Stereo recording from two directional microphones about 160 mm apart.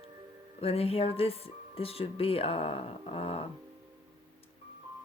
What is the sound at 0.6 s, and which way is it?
Speech, 40° left (ahead or behind).